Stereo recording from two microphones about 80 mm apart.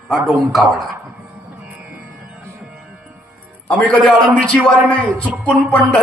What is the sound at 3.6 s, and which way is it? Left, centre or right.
A man's voice, centre.